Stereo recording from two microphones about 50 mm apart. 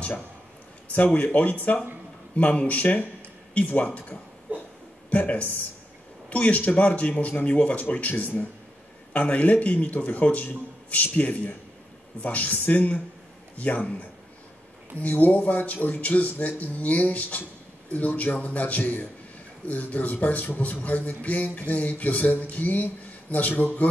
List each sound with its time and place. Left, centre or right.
0.9 s a man's voice: left
4.5 s a sound: right
5.1 s a man's voice: left